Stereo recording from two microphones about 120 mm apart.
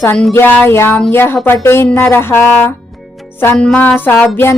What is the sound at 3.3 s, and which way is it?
Speech, 15° left (ahead or behind).